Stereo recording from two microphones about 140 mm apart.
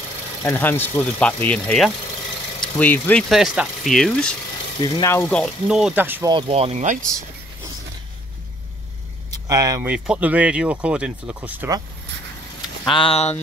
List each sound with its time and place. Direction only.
0.4 s speech: 15° left (ahead or behind)
4.8 s speech: 30° left (ahead or behind)
5.1 s speech: 10° left (ahead or behind)
5.7 s speech: 5° right (ahead or behind)
6.2 s speech: 35° right (ahead or behind); by 7.1 s 60° right (ahead or behind)
9.5 s speech: 25° right (ahead or behind)
9.8 s speech: 10° right (ahead or behind)
12.9 s speech: 40° left (ahead or behind)